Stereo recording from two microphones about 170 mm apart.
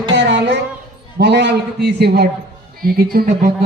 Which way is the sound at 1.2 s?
80° right.